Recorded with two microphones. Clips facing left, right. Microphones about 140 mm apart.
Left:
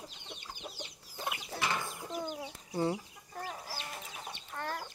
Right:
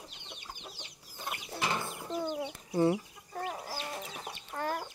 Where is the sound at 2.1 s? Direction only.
25° right (ahead or behind).